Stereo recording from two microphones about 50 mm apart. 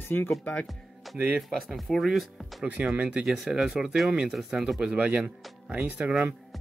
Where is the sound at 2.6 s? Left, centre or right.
Centre.